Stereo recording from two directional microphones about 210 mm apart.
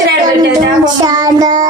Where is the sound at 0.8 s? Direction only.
20° right (ahead or behind).